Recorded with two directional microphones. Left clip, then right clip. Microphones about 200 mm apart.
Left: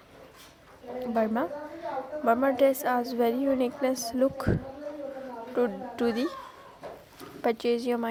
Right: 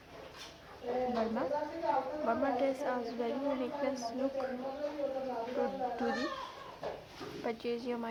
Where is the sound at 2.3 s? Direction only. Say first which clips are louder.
Left 11 dB; 40° left (ahead or behind).